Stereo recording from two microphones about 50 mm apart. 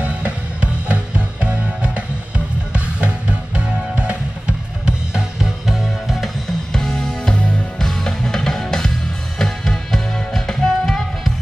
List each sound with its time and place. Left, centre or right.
0.0 s music: right; by 6.3 s centre
6.7 s music: centre
7.8 s music: centre